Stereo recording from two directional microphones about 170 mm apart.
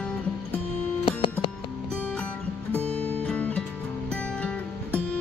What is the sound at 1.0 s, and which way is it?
Music, 30° left (ahead or behind).